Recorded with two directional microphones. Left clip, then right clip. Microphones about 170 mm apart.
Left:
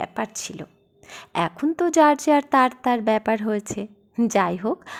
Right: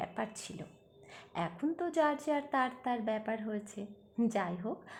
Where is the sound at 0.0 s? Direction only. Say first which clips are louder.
Left 11 dB; 35° left (ahead or behind).